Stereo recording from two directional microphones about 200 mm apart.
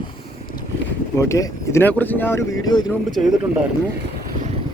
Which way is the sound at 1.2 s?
15° left (ahead or behind).